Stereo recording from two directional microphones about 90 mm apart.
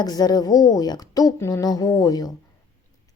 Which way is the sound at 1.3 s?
30° left (ahead or behind).